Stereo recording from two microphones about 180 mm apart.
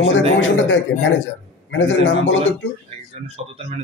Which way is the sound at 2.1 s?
90° left.